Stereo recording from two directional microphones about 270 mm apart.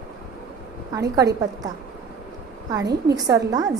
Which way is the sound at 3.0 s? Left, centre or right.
Centre.